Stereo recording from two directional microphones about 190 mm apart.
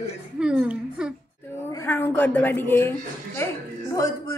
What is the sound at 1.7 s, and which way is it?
A woman's voice, 10° left (ahead or behind).